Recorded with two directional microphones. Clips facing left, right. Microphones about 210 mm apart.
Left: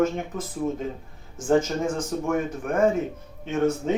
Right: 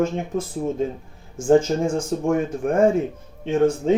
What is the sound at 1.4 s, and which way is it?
Speech, 30° right (ahead or behind).